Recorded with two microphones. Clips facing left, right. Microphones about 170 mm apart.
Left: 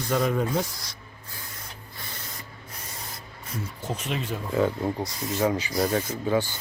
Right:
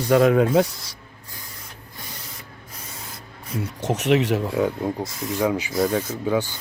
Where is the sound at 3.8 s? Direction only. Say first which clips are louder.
Right 12 dB; 75° right (ahead or behind).